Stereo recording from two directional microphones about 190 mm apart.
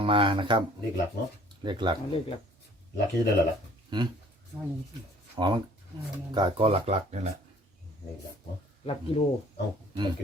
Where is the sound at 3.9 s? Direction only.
25° right (ahead or behind).